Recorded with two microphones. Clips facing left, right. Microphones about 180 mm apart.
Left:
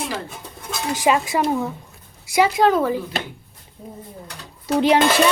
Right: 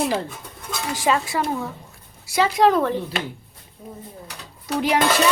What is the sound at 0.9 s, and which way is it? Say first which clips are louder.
A woman's voice: left 3 dB; 15° left (ahead or behind).